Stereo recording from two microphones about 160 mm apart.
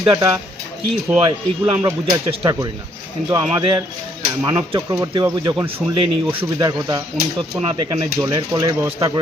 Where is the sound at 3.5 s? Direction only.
25° right (ahead or behind).